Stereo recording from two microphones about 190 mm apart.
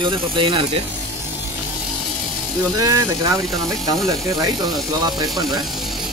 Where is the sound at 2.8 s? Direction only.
15° right (ahead or behind).